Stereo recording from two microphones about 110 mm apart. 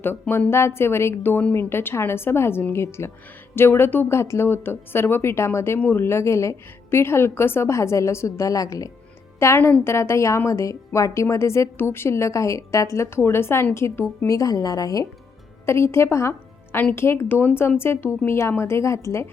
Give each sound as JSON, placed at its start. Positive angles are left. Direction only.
{"t": 0.0, "sound": "speech", "side_deg": 20}